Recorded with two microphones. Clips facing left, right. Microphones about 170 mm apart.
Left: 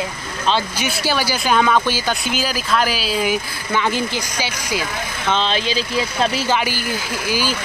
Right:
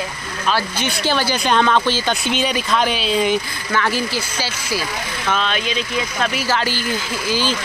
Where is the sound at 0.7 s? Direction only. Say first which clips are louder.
Right 1 dB; 10° left (ahead or behind).